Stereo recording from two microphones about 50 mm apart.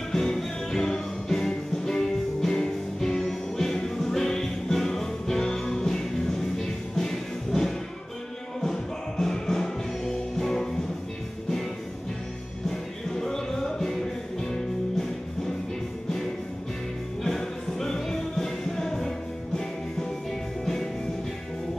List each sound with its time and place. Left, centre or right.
0.1 s music: centre
12.6 s music: centre
17.2 s music: centre